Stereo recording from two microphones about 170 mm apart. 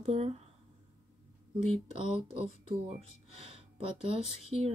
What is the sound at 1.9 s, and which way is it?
Speech, 35° right (ahead or behind).